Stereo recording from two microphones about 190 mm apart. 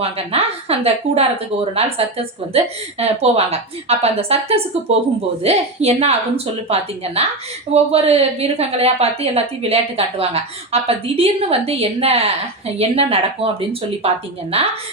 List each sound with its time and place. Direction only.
0.0 s a woman's voice: 30° right (ahead or behind)